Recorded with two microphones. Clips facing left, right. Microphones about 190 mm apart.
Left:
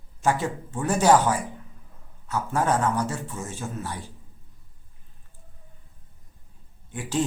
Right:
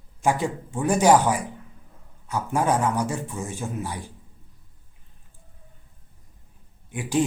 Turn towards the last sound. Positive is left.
turn(degrees=-15)  # may be behind; listen again after turning